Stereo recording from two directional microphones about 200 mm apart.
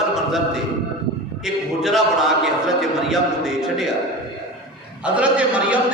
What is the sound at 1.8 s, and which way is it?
Speech, centre (ahead or behind).